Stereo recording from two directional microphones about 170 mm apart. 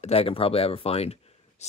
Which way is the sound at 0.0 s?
35° left (ahead or behind).